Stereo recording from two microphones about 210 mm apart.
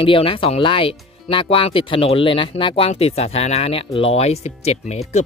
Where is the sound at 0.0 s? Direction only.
25° left (ahead or behind).